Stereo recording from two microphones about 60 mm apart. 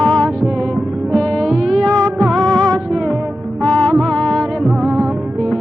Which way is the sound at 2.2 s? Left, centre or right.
Centre.